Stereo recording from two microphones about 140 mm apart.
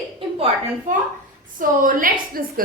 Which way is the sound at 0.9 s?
70° right (ahead or behind).